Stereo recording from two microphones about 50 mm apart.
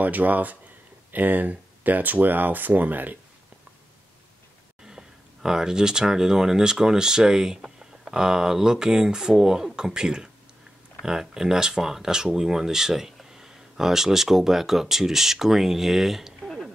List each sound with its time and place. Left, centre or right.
0.0 s speech: right
4.8 s speech: centre
16.4 s music: centre